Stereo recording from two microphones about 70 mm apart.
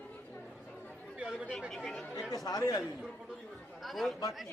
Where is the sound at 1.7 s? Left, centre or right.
Centre.